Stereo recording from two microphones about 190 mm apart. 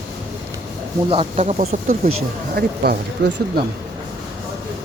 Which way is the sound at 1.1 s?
35° right (ahead or behind).